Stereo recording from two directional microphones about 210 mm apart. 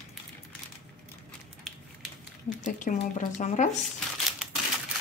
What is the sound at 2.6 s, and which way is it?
Speech, 35° left (ahead or behind).